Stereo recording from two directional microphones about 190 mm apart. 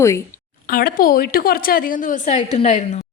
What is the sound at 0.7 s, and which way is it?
A woman's voice, 50° left (ahead or behind).